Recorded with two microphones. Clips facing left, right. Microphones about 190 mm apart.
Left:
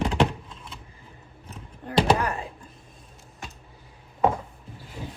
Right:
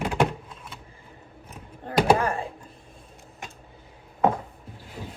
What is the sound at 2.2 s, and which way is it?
Speech, 30° right (ahead or behind).